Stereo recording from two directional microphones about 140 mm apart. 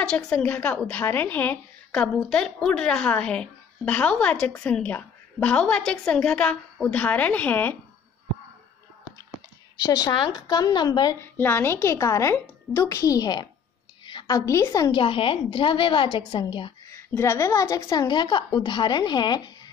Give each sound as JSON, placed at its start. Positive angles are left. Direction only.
{"t": 0.0, "sound": "a woman's voice", "side_deg": 5}
{"t": 9.8, "sound": "a woman's voice", "side_deg": 25}
{"t": 11.1, "sound": "a woman's voice", "side_deg": 15}
{"t": 14.9, "sound": "a woman's voice", "side_deg": 40}
{"t": 16.9, "sound": "a woman's voice", "side_deg": 20}